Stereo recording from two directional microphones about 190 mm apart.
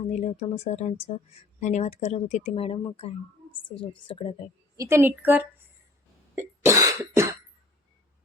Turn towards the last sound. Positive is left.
turn(degrees=-15)  # may be behind; listen again after turning